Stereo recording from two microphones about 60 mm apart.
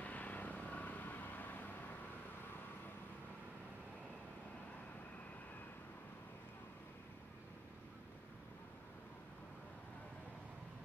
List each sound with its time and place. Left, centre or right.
0.0 s vehicle: left